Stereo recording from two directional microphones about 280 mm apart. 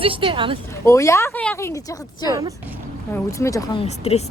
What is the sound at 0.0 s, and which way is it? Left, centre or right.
Speech, centre.